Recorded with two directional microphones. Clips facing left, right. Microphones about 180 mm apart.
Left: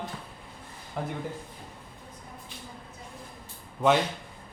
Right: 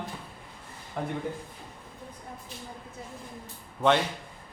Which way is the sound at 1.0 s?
Centre (ahead or behind).